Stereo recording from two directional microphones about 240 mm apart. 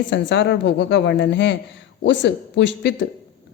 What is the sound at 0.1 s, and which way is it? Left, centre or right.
A woman's voice, left.